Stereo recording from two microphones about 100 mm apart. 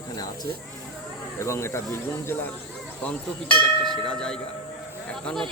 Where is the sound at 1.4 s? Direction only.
25° left (ahead or behind).